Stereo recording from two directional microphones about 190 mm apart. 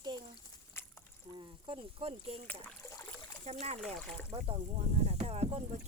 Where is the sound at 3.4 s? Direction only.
35° right (ahead or behind).